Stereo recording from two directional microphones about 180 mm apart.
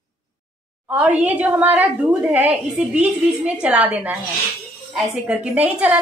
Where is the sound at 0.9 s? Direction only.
10° right (ahead or behind).